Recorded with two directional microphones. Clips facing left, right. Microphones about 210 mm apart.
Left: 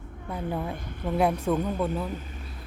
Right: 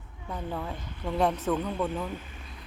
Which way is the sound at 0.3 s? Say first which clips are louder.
Left 3 dB; 10° left (ahead or behind).